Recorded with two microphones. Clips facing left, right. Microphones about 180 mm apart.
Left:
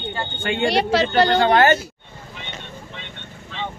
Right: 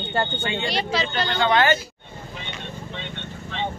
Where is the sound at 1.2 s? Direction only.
40° left (ahead or behind).